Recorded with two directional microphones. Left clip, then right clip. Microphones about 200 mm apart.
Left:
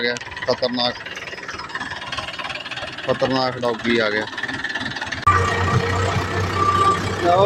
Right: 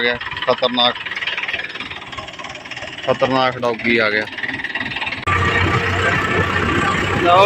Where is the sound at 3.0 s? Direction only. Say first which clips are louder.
Right 4 dB; centre (ahead or behind).